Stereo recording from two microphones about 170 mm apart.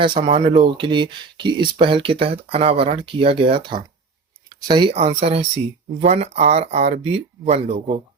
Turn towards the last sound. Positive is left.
turn(degrees=-40)  # may be behind; listen again after turning